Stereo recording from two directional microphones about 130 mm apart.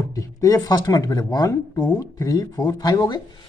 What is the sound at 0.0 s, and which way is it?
Speech, 25° left (ahead or behind).